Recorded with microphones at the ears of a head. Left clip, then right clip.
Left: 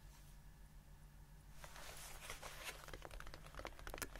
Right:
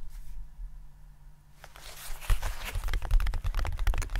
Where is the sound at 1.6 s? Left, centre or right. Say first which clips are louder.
Right 9 dB; right.